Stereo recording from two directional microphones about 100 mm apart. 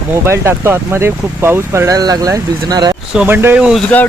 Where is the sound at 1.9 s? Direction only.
40° right (ahead or behind).